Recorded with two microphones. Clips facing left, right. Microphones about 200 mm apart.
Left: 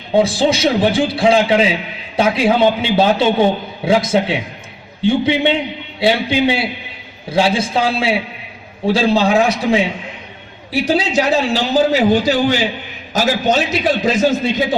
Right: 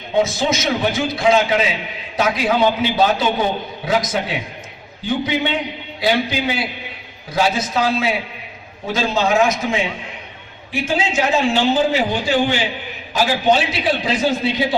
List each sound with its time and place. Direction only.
0.2 s a man's voice: 30° left (ahead or behind)